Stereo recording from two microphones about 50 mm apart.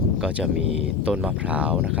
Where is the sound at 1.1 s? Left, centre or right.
Centre.